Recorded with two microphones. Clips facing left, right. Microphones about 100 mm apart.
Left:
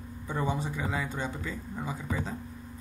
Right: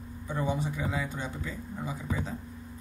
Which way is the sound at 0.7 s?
5° right (ahead or behind).